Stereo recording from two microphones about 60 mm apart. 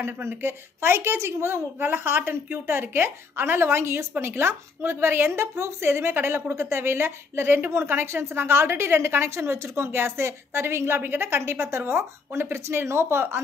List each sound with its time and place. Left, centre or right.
0.0 s speech: right
1.8 s a woman's voice: right